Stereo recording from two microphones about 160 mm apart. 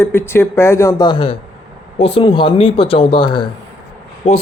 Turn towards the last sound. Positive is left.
turn(degrees=40)  # may be behind; listen again after turning